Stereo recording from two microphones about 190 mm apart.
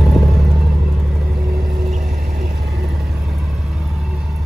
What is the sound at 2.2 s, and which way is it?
Vehicle, 55° right (ahead or behind).